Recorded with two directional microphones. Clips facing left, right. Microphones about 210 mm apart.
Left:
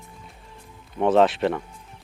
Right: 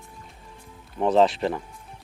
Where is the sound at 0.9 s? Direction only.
Centre (ahead or behind).